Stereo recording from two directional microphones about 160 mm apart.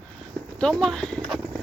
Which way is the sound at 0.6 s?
5° left (ahead or behind).